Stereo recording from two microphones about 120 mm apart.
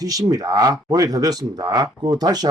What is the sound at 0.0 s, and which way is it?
Speech, 30° right (ahead or behind).